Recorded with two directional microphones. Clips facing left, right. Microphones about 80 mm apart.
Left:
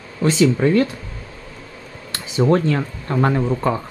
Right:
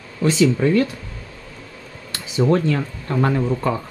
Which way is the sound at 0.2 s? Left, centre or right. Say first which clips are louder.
Left 1 dB; left.